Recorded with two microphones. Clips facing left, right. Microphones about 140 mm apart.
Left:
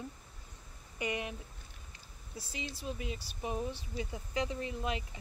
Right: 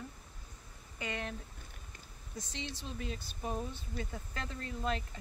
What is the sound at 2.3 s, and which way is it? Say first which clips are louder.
Speech: even; 5° left (ahead or behind).